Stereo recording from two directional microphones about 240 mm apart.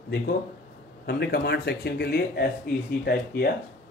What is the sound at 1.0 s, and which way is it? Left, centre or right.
Speech, left.